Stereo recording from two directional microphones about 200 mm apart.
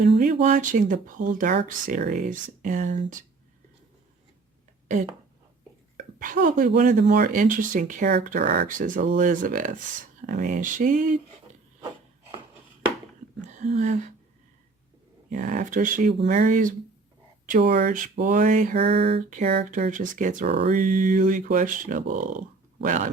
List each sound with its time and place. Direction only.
0.2 s speech: 40° right (ahead or behind)
6.0 s speech: 40° right (ahead or behind)
13.4 s a sound: 35° right (ahead or behind)
15.3 s speech: 40° right (ahead or behind)
17.7 s speech: 40° right (ahead or behind)